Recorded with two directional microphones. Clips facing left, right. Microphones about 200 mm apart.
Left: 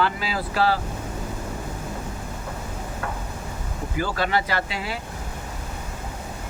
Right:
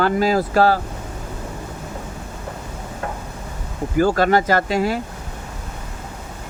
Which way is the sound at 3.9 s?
45° right (ahead or behind).